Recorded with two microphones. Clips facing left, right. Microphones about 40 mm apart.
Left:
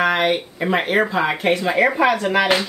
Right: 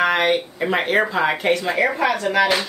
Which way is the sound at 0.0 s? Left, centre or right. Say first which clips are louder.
Even; centre.